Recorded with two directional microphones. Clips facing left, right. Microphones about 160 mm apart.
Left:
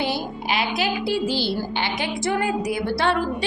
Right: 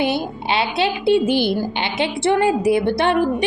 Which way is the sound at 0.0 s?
25° right (ahead or behind).